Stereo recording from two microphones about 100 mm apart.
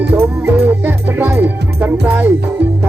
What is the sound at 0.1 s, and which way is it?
Music, 20° right (ahead or behind).